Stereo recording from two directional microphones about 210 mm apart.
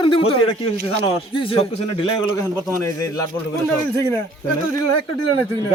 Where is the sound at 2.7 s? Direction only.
15° left (ahead or behind).